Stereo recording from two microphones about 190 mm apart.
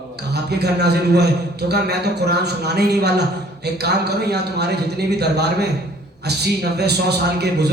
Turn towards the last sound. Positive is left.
turn(degrees=-60)  # may be behind; listen again after turning